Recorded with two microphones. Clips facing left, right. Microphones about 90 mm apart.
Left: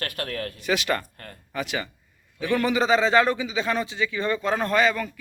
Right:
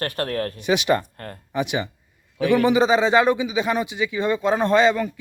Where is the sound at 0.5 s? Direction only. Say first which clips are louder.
Right 5 dB; 20° right (ahead or behind).